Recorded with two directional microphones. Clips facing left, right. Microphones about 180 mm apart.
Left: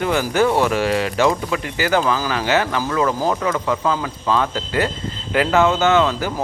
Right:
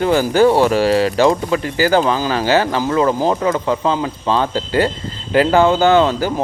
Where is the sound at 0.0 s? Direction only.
35° right (ahead or behind).